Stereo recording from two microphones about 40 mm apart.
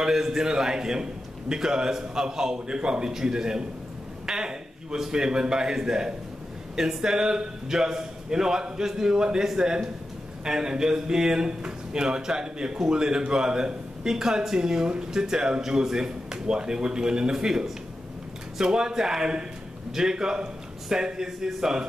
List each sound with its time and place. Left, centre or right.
0.0 s speech: centre
4.3 s a sound: centre
5.1 s speech: centre